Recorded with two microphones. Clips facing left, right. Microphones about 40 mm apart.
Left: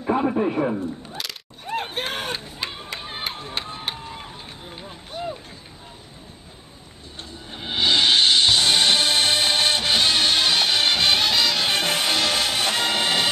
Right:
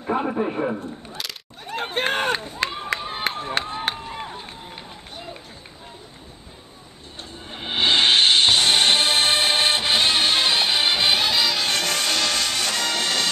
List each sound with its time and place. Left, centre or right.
0.0 s a sound: centre
1.8 s run: right
7.3 s music: right
10.6 s music: centre
11.7 s music: centre